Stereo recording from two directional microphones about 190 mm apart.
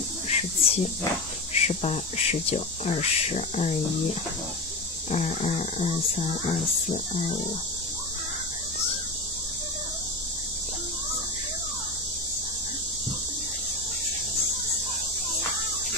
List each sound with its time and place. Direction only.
0.3 s a sound: 30° left (ahead or behind)
1.5 s speech: 35° left (ahead or behind)
5.1 s speech: 40° left (ahead or behind)